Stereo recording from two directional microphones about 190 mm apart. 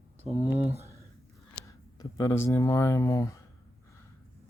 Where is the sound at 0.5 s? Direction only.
35° right (ahead or behind).